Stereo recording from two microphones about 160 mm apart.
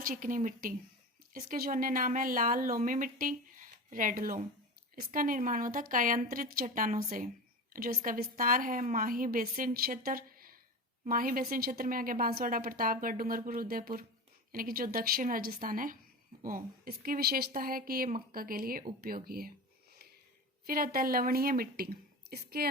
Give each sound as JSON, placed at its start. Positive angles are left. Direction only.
{"t": 0.0, "sound": "speech", "side_deg": -60}
{"t": 20.7, "sound": "speech", "side_deg": -65}